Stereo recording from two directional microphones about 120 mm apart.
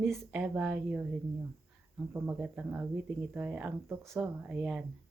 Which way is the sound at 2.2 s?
15° right (ahead or behind).